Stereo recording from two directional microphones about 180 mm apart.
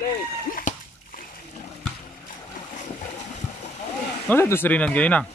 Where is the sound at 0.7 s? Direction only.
45° left (ahead or behind).